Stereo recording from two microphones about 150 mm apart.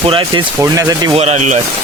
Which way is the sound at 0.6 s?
25° right (ahead or behind).